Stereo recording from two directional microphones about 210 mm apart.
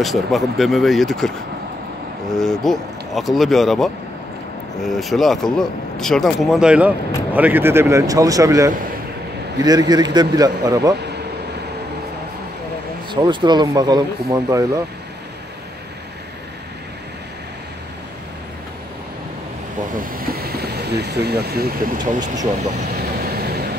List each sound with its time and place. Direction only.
0.0 s speech: centre (ahead or behind)
2.3 s a man's voice: centre (ahead or behind); by 11.0 s 15° right (ahead or behind)
13.1 s speech: 20° right (ahead or behind)
20.0 s vehicle: 45° right (ahead or behind)